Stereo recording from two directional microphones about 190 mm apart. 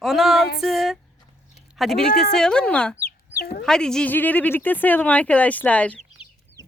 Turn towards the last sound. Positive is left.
turn(degrees=5)  # may be behind; listen again after turning